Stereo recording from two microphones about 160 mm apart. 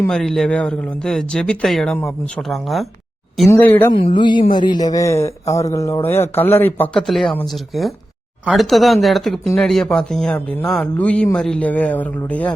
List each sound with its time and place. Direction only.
0.0 s a man's voice: 5° left (ahead or behind)
3.5 s speech: 15° left (ahead or behind)
3.9 s a woman's voice: 30° left (ahead or behind); by 12.5 s 10° left (ahead or behind)